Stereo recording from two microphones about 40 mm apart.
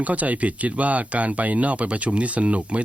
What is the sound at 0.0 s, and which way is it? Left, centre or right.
Speech, right.